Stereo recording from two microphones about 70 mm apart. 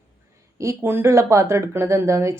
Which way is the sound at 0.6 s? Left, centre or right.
Right.